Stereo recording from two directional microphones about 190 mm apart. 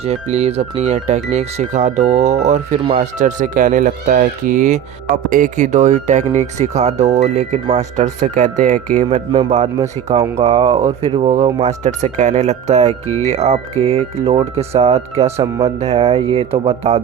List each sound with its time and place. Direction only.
0.0 s speech: 35° right (ahead or behind)
13.1 s speech: 15° left (ahead or behind)
13.3 s speech: 35° right (ahead or behind)